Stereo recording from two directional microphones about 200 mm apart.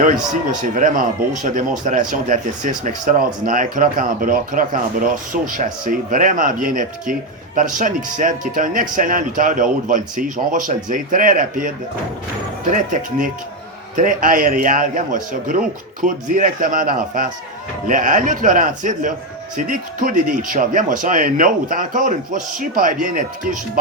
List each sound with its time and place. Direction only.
0.4 s speech: 40° right (ahead or behind)
12.7 s speech: 40° right (ahead or behind)